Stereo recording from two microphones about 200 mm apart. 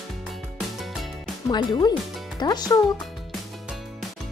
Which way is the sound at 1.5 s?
20° left (ahead or behind).